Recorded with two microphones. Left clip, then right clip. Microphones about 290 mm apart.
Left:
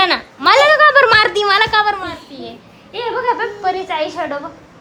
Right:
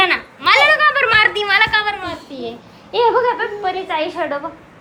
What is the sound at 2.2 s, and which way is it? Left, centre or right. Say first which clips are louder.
Speech: right 4 dB; centre.